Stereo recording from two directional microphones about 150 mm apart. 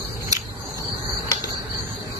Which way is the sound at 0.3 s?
25° right (ahead or behind).